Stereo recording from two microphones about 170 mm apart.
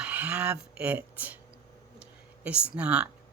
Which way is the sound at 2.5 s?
5° right (ahead or behind).